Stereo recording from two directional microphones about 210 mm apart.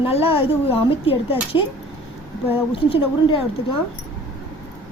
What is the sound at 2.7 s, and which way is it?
Speech, 25° left (ahead or behind).